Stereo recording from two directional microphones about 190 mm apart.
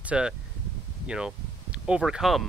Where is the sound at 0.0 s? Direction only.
5° right (ahead or behind).